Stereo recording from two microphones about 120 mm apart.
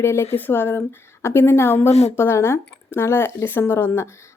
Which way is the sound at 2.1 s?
20° left (ahead or behind).